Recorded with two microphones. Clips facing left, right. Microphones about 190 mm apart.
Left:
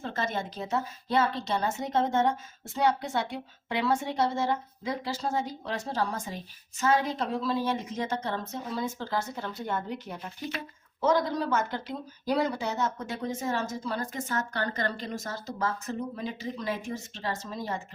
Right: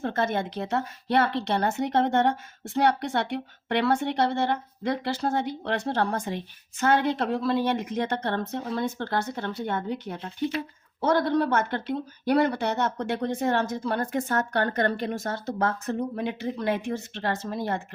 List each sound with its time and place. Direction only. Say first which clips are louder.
0.0 s a woman's voice: right 6 dB; 55° right (ahead or behind)